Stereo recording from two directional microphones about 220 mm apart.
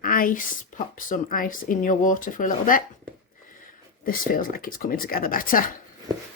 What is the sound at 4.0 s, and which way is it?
Speech, 40° left (ahead or behind).